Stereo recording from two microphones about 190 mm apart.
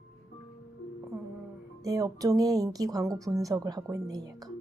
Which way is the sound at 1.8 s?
20° right (ahead or behind).